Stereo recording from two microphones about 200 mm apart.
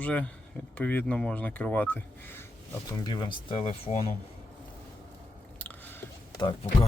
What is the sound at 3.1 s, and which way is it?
Speech, 20° left (ahead or behind).